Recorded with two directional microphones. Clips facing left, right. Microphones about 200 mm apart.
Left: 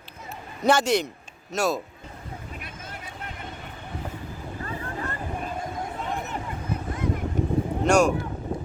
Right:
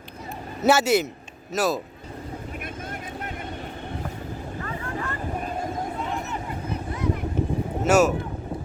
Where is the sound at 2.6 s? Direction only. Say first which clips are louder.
Right 6 dB; 50° right (ahead or behind).